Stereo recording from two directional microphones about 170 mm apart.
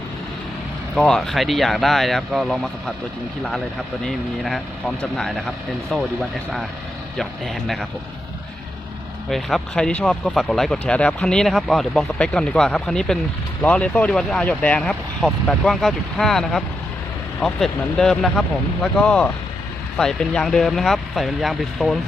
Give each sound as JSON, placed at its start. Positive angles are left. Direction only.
{"t": 0.9, "sound": "speech", "side_deg": 5}
{"t": 4.0, "sound": "speech", "side_deg": 5}
{"t": 7.2, "sound": "speech", "side_deg": 0}
{"t": 9.3, "sound": "speech", "side_deg": 5}